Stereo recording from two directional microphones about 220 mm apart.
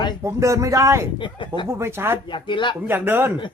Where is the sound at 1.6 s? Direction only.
10° right (ahead or behind).